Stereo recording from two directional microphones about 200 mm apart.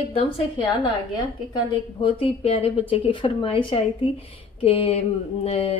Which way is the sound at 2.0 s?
30° left (ahead or behind).